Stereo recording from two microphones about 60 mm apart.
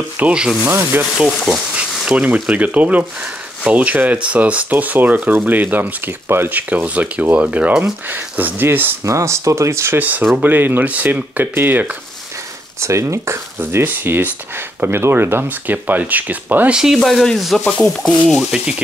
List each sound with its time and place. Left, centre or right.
0.3 s speech: centre
0.7 s speech: right
1.1 s speech: centre
1.8 s speech: centre; by 6.6 s right
6.7 s speech: right
8.1 s speech: right
9.0 s speech: right
9.9 s speech: right
12.8 s speech: right
15.4 s speech: right
16.7 s speech: centre
17.0 s speech: centre
17.7 s a sound: centre
18.3 s speech: centre